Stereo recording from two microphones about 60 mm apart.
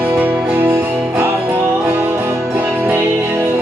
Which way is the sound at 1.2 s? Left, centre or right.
Right.